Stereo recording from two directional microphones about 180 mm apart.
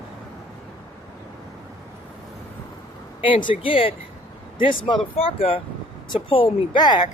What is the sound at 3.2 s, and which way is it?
Speech, 30° left (ahead or behind).